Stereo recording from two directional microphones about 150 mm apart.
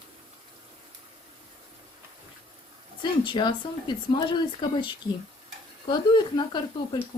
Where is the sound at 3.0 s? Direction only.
30° left (ahead or behind).